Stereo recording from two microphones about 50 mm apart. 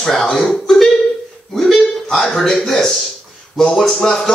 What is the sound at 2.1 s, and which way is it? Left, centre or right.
Speech, centre.